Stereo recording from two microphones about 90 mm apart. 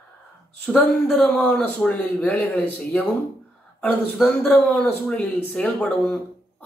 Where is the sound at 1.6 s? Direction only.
15° left (ahead or behind).